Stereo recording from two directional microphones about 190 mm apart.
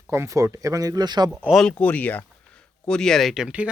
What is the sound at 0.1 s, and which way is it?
Speech, 15° right (ahead or behind).